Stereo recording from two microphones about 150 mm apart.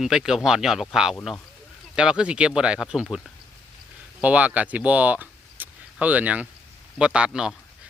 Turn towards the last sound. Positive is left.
turn(degrees=-5)  # may be behind; listen again after turning